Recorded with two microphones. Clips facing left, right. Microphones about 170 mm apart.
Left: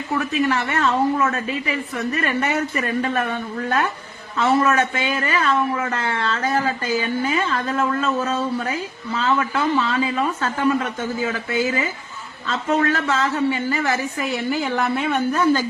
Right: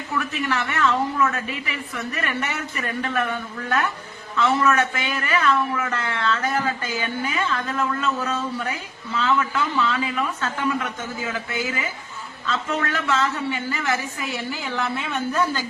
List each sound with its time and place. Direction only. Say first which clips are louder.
0.2 s a man's voice: left 4 dB; 40° left (ahead or behind)
4.4 s a man's voice: left 2 dB; 40° left (ahead or behind)
12.5 s a woman's voice: left 5 dB; 40° left (ahead or behind)